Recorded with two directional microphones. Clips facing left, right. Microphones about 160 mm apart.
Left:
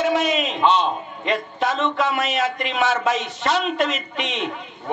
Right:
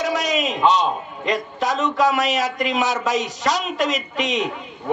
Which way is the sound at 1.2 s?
40° right (ahead or behind).